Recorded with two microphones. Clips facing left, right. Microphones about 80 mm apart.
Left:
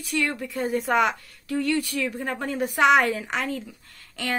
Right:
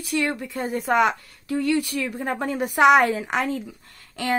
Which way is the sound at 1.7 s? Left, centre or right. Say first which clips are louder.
Right 3 dB; centre.